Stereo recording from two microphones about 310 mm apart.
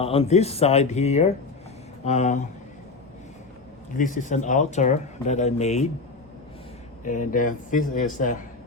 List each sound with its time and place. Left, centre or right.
0.0 s speech: centre
3.9 s speech: left
7.0 s speech: left